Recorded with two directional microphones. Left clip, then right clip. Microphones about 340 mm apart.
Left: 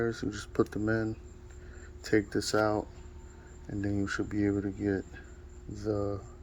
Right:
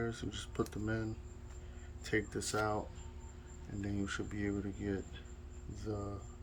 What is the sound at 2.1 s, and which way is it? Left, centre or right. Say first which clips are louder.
Speech: left 8 dB; centre.